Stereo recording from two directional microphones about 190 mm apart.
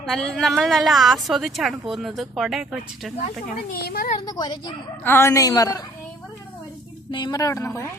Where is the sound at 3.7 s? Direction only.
50° left (ahead or behind).